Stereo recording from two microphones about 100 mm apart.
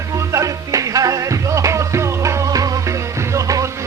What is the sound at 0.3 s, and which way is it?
Music, 35° right (ahead or behind).